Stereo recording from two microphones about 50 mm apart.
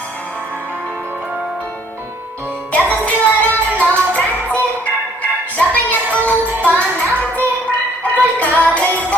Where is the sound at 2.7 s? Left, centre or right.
Left.